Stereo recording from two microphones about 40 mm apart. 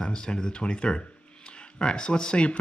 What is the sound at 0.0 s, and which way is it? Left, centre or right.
Speech, centre.